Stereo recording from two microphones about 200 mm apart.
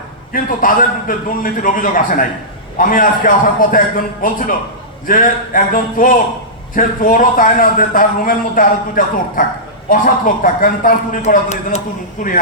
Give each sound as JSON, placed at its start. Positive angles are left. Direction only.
{"t": 0.3, "sound": "a man's voice", "side_deg": 40}